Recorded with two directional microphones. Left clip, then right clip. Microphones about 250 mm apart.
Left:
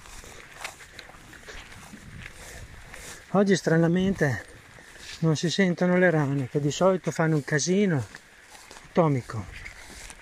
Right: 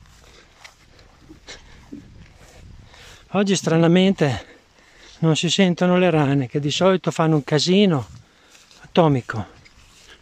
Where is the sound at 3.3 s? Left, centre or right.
Centre.